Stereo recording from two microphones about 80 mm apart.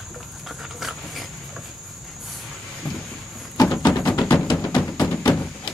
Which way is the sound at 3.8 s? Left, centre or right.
Left.